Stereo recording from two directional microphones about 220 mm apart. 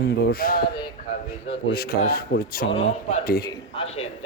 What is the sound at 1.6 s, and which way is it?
Speech, 45° left (ahead or behind).